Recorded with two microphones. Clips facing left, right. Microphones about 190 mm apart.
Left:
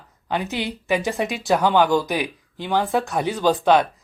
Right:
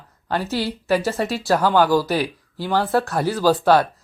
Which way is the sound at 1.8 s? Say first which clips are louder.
Right 1 dB; 5° right (ahead or behind).